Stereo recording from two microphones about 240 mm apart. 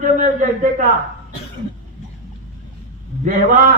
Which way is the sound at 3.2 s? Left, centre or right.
Right.